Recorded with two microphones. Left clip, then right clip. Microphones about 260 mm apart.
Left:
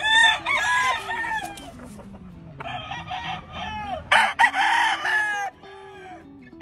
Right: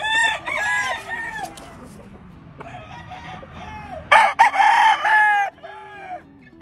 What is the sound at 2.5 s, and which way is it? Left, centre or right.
Chicken, centre.